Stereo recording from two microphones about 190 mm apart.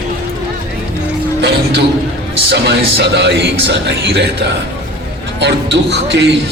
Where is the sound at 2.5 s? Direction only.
60° right (ahead or behind).